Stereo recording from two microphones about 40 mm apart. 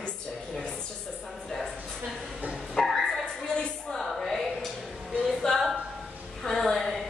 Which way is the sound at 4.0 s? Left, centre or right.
Centre.